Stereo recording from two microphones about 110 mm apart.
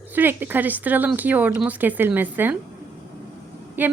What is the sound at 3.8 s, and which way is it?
Speech, 15° right (ahead or behind).